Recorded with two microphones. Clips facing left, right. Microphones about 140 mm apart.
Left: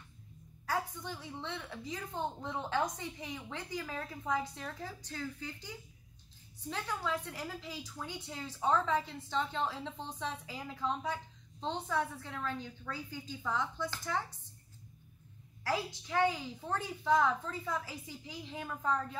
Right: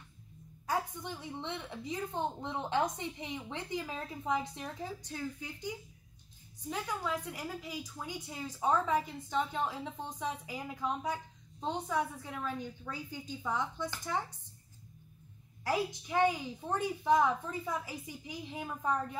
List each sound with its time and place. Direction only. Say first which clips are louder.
0.7 s a woman's voice: right 1 dB; 20° right (ahead or behind)
15.6 s a woman's voice: right 2 dB; 15° right (ahead or behind)